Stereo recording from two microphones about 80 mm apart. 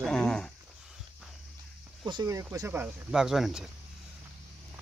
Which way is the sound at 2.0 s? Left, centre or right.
Right.